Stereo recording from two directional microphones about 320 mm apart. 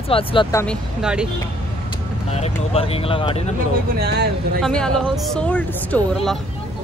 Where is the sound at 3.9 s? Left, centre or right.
Right.